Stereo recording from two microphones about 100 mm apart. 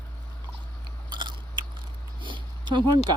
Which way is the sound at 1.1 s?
50° right (ahead or behind).